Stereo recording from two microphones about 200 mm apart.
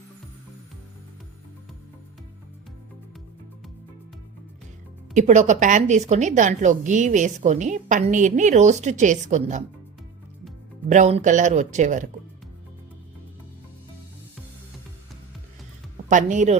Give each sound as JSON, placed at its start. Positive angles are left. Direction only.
{"t": 5.1, "sound": "a woman's voice", "side_deg": -35}
{"t": 10.8, "sound": "a woman's voice", "side_deg": -35}
{"t": 16.0, "sound": "a woman's voice", "side_deg": -40}